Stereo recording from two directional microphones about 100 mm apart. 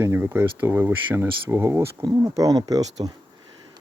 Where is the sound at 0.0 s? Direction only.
25° right (ahead or behind).